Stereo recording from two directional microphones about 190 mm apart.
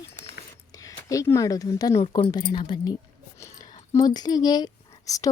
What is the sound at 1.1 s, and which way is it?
Speech, 15° left (ahead or behind).